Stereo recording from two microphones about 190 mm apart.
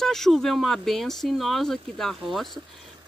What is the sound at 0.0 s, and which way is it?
Speech, centre (ahead or behind).